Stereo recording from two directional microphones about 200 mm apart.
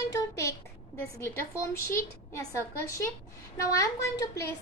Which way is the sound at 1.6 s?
15° left (ahead or behind).